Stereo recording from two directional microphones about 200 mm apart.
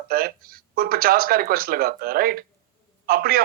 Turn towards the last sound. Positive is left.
turn(degrees=-45)  # may be behind; listen again after turning